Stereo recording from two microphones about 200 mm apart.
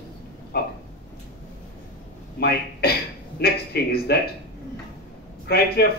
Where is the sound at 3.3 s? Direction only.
50° left (ahead or behind).